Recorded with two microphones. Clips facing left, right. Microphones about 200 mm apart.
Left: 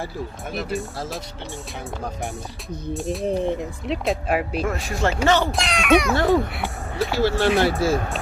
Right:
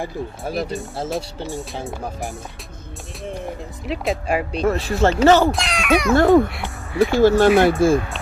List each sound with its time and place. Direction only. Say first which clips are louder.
1.1 s speech: right 7 dB; centre (ahead or behind)
2.9 s speech: left 9 dB; centre (ahead or behind)
4.6 s speech: right 6 dB; 35° right (ahead or behind)
5.5 s speech: left 1 dB; centre (ahead or behind)
6.1 s speech: right 6 dB; 50° right (ahead or behind)